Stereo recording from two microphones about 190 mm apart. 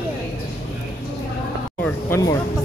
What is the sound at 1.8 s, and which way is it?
Speech, 10° left (ahead or behind).